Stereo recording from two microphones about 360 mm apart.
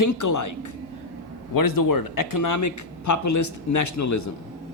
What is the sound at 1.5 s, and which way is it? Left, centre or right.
Speech, left.